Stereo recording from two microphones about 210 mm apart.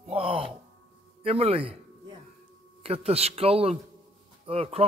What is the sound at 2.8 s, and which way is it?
A man's voice, 30° right (ahead or behind).